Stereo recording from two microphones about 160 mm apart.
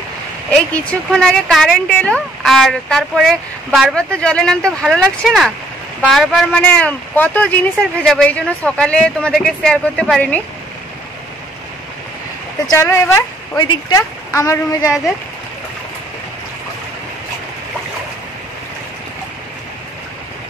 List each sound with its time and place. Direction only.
0.5 s a woman's voice: 5° left (ahead or behind)
12.6 s a woman's voice: 15° left (ahead or behind)
13.6 s a woman's voice: 25° left (ahead or behind)